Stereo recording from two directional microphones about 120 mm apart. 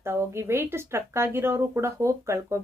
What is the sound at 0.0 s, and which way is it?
Speech, 20° right (ahead or behind).